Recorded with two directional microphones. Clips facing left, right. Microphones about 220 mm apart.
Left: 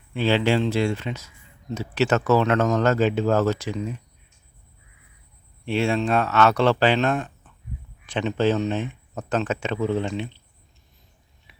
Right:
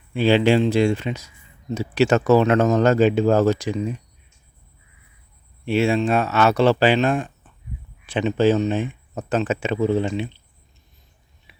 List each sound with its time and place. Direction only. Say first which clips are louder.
0.1 s speech: right 4 dB; 15° right (ahead or behind)
5.6 s speech: right 3 dB; 5° right (ahead or behind)